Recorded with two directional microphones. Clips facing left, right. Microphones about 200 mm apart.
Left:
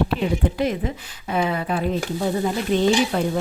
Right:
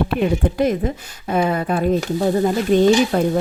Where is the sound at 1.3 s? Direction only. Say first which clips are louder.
Right 4 dB; 45° right (ahead or behind).